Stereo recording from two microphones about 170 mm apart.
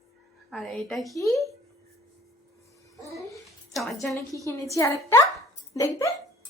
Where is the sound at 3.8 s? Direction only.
Centre (ahead or behind).